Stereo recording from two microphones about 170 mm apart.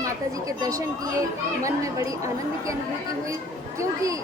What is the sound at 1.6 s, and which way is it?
Speech, 20° right (ahead or behind).